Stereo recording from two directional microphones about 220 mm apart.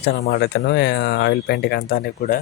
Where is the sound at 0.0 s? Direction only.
50° left (ahead or behind).